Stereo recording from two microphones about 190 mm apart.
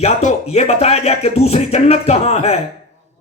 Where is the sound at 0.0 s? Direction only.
35° left (ahead or behind).